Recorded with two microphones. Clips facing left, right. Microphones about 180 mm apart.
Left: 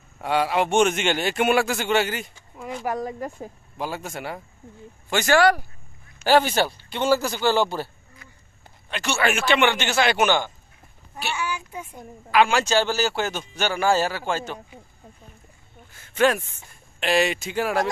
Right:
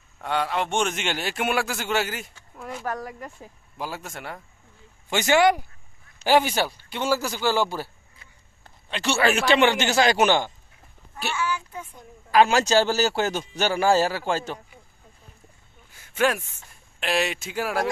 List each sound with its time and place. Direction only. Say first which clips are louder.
0.2 s a man's voice: left 4 dB; 5° left (ahead or behind)
2.8 s speech: left 4 dB; 15° left (ahead or behind)
3.2 s speech: left 7 dB; 45° left (ahead or behind)
3.7 s a man's voice: left 3 dB; centre (ahead or behind)
5.1 s speech: left 1 dB; 20° right (ahead or behind)
8.9 s speech: right 2 dB; 30° right (ahead or behind)
11.3 s a sound: right 3 dB; 15° left (ahead or behind)
12.3 s speech: right 1 dB; 40° right (ahead or behind)
15.9 s a sound: left 3 dB; 10° right (ahead or behind)
17.0 s a man's voice: left 4 dB; centre (ahead or behind)